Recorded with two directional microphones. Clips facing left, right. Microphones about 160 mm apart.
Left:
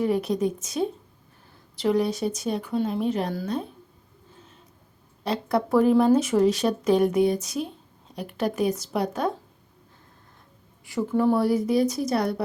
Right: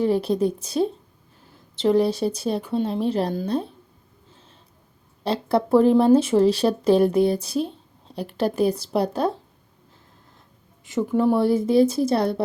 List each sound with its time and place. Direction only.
0.0 s speech: 30° right (ahead or behind)
5.2 s speech: 30° right (ahead or behind)
10.8 s speech: 20° right (ahead or behind)